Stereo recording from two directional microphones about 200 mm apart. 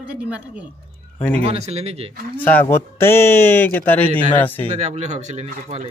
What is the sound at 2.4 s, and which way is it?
Speech, 10° left (ahead or behind).